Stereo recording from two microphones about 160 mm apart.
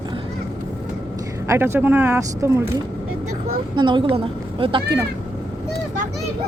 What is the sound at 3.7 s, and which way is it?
Speech, 30° right (ahead or behind).